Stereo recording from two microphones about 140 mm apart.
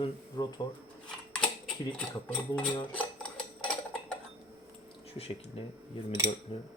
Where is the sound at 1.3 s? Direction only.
5° left (ahead or behind).